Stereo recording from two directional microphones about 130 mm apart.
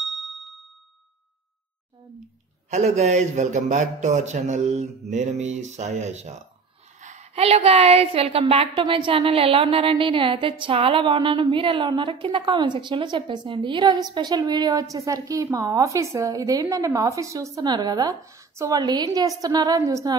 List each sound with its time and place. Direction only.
0.0 s ding: centre (ahead or behind)
2.7 s a man's voice: 65° right (ahead or behind); by 20.2 s 25° right (ahead or behind)